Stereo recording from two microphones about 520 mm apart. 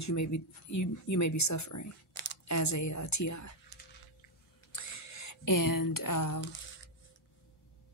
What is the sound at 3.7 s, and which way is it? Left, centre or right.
Dog, centre.